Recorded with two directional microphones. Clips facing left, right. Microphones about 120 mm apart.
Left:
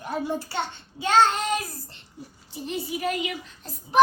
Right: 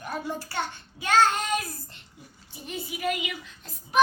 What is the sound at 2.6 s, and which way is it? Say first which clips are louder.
Speech: left 2 dB; 35° left (ahead or behind).